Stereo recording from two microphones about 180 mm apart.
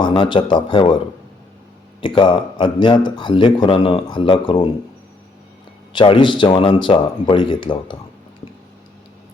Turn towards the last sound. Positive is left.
turn(degrees=25)  # may be behind; listen again after turning